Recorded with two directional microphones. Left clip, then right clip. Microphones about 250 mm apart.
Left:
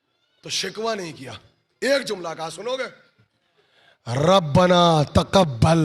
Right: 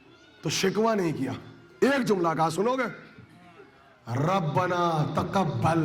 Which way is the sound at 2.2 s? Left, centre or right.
Right.